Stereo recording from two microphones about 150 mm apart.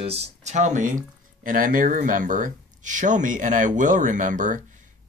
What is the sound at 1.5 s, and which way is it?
Speech, 65° right (ahead or behind).